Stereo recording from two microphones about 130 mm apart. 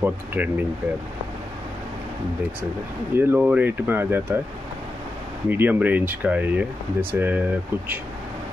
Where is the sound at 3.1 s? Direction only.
15° right (ahead or behind).